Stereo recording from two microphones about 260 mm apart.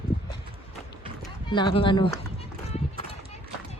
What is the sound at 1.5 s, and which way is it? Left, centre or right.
Speech, centre.